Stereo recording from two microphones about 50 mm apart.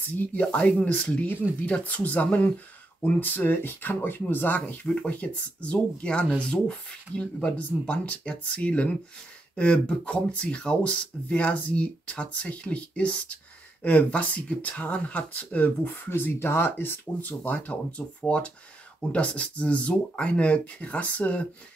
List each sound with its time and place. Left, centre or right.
0.1 s speech: left
3.0 s speech: left
5.1 s speech: left
16.2 s speech: left
17.5 s speech: left